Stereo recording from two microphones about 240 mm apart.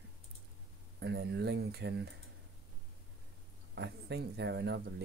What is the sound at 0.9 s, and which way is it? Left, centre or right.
Speech, right.